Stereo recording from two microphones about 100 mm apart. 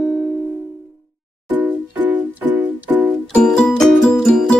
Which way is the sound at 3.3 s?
10° left (ahead or behind).